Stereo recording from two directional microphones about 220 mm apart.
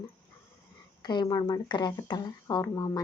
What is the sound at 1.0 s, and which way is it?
Speech, 20° left (ahead or behind).